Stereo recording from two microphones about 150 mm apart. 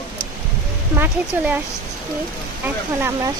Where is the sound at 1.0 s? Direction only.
10° right (ahead or behind).